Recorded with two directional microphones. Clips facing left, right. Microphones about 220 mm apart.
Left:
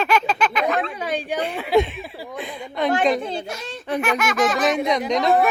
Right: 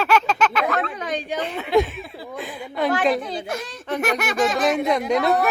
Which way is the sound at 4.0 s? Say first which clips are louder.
Even; 40° right (ahead or behind).